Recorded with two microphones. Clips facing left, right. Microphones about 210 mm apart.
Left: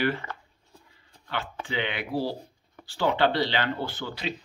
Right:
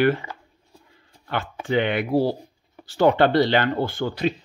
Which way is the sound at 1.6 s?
50° right (ahead or behind).